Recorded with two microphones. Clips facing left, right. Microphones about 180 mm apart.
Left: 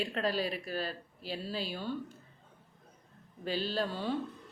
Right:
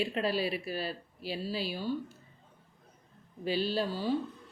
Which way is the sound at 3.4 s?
10° right (ahead or behind).